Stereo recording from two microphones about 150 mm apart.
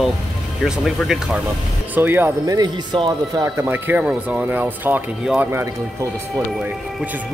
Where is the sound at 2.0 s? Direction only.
15° right (ahead or behind).